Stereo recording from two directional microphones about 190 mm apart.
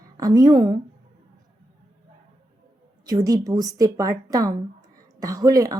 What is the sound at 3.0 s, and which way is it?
Speech, 20° right (ahead or behind).